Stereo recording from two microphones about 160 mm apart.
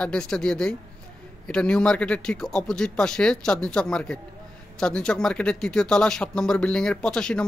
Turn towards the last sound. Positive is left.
turn(degrees=5)  # may be behind; listen again after turning